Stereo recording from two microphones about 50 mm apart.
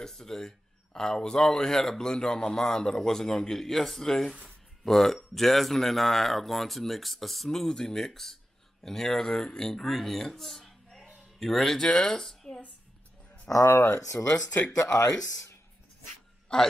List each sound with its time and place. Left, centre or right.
0.0 s speech: centre
12.0 s a sound: centre
13.7 s speech: left
15.0 s speech: left
16.5 s speech: centre